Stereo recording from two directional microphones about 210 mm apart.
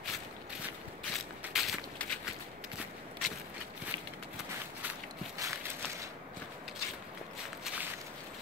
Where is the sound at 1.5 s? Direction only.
Centre (ahead or behind).